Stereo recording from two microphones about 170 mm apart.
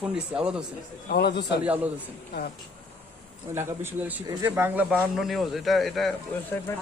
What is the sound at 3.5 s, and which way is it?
Speech, 15° right (ahead or behind).